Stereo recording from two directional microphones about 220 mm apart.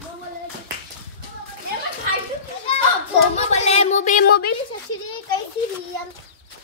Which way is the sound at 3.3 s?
30° left (ahead or behind).